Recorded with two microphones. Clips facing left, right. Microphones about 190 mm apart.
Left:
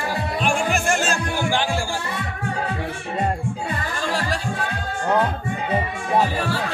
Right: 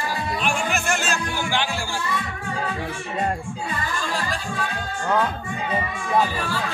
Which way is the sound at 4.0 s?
70° left (ahead or behind).